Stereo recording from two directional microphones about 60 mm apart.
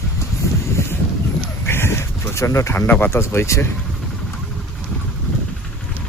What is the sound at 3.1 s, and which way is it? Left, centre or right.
Speech, left.